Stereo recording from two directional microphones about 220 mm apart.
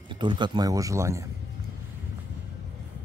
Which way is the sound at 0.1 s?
20° right (ahead or behind).